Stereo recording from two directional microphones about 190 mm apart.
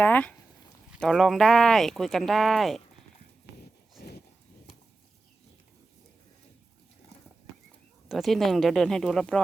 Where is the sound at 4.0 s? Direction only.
55° left (ahead or behind).